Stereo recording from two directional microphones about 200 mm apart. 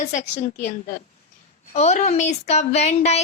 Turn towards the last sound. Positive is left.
turn(degrees=35)  # may be behind; listen again after turning